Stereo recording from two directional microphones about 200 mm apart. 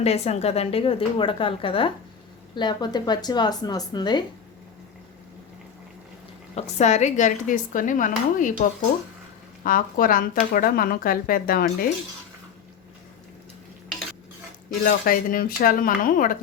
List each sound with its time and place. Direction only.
0.0 s a woman's voice: 30° left (ahead or behind)
6.6 s speech: 35° left (ahead or behind)
9.6 s speech: 45° left (ahead or behind)
14.8 s speech: 45° left (ahead or behind)